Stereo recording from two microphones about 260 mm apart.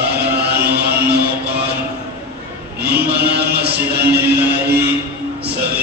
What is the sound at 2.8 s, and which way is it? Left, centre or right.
Music, right.